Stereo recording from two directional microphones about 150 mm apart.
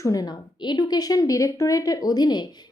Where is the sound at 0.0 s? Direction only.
25° left (ahead or behind).